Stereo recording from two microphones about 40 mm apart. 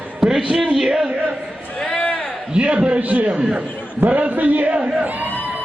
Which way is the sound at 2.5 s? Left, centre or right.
Right.